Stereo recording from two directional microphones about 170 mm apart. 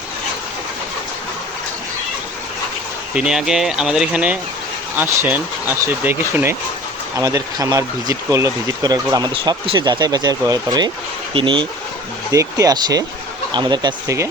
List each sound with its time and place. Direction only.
3.2 s speech: 5° right (ahead or behind); by 11.7 s 30° right (ahead or behind)
12.3 s speech: 20° right (ahead or behind)